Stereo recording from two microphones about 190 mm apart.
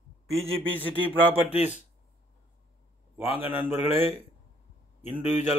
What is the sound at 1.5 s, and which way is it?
Speech, 35° left (ahead or behind).